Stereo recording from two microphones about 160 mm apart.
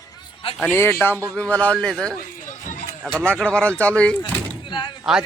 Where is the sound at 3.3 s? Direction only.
5° left (ahead or behind).